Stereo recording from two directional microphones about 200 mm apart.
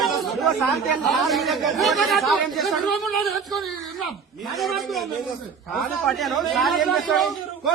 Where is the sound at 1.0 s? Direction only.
Centre (ahead or behind).